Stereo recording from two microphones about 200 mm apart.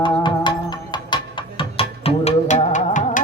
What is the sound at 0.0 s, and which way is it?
Music, 25° left (ahead or behind).